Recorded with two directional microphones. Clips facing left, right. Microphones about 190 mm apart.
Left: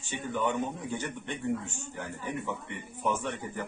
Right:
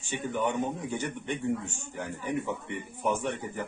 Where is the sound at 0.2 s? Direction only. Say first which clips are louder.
Right 1 dB; 15° right (ahead or behind).